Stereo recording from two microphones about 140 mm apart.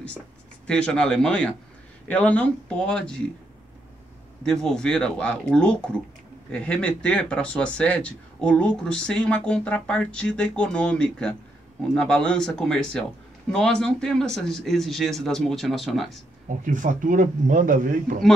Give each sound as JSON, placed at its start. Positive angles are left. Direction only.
{"t": 0.7, "sound": "speech", "side_deg": 5}
{"t": 4.4, "sound": "speech", "side_deg": 5}
{"t": 16.4, "sound": "a man's voice", "side_deg": -65}